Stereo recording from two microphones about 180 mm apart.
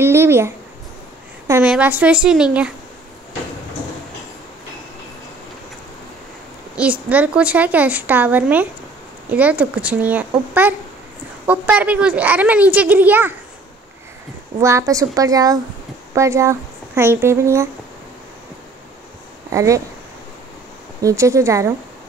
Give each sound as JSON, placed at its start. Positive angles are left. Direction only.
{"t": 0.0, "sound": "a sound", "side_deg": -15}
{"t": 1.5, "sound": "a woman's voice", "side_deg": -5}
{"t": 6.8, "sound": "a woman's voice", "side_deg": -10}
{"t": 14.6, "sound": "a woman's voice", "side_deg": -15}
{"t": 19.5, "sound": "speech", "side_deg": -15}
{"t": 21.0, "sound": "a woman's voice", "side_deg": -15}